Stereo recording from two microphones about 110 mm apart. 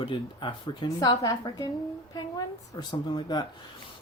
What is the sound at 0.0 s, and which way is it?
Speech, 45° left (ahead or behind).